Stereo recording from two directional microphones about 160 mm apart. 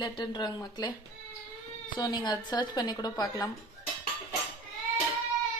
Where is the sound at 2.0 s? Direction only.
25° left (ahead or behind).